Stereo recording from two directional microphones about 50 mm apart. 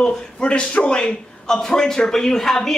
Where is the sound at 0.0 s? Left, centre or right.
Centre.